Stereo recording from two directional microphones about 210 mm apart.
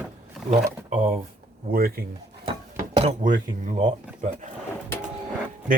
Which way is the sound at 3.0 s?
35° right (ahead or behind).